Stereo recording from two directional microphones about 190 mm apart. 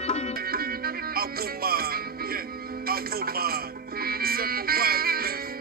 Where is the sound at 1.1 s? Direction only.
50° right (ahead or behind).